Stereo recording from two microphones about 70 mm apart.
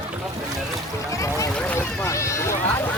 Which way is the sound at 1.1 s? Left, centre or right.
Left.